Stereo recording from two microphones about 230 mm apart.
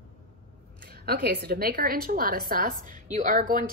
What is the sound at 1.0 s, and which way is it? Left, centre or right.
A woman's voice, right.